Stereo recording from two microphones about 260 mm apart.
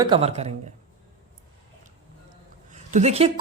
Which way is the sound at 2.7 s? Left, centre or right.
Right.